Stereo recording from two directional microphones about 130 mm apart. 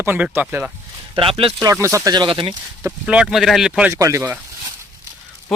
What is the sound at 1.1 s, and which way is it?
Speech, 45° right (ahead or behind).